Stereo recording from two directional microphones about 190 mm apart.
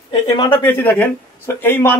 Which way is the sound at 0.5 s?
10° left (ahead or behind).